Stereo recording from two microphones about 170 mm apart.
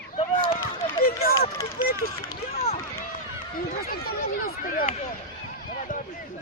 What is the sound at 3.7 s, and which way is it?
Speech, 60° left (ahead or behind).